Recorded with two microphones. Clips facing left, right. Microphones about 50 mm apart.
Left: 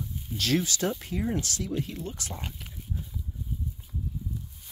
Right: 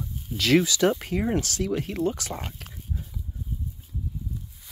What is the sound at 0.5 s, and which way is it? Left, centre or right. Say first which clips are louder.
Speech: right 8 dB; right.